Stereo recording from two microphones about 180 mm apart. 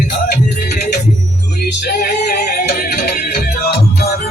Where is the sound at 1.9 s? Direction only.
50° left (ahead or behind).